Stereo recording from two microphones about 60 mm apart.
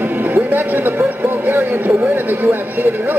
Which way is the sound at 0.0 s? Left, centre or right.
Right.